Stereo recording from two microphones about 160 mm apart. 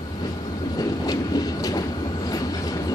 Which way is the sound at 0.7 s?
25° left (ahead or behind).